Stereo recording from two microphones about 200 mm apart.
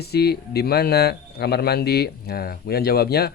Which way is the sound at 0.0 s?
55° left (ahead or behind).